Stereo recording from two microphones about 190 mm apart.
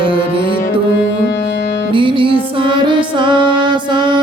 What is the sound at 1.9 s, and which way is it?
Music, 25° right (ahead or behind).